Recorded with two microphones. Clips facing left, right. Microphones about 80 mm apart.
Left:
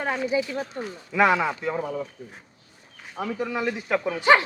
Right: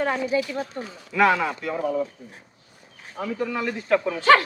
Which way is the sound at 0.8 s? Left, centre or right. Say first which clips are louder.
Even; left.